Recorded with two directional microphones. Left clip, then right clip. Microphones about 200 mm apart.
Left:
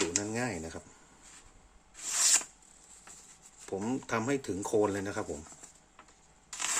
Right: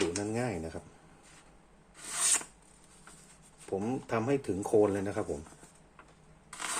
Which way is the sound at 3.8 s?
15° left (ahead or behind).